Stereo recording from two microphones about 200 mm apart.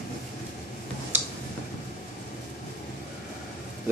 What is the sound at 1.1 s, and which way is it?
Tick-tock, 10° right (ahead or behind).